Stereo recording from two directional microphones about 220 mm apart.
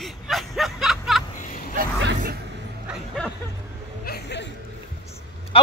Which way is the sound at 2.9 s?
Centre (ahead or behind).